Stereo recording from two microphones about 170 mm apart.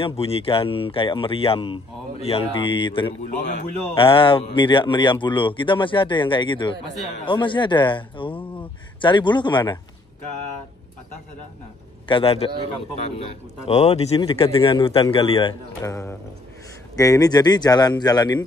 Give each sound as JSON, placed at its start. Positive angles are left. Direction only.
{"t": 0.0, "sound": "speech", "side_deg": 35}
{"t": 3.3, "sound": "a man's voice", "side_deg": 45}
{"t": 3.9, "sound": "speech", "side_deg": 30}
{"t": 12.1, "sound": "speech", "side_deg": 35}
{"t": 15.8, "sound": "speech", "side_deg": 15}